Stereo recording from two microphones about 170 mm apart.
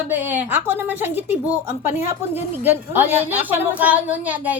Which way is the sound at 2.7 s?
10° right (ahead or behind).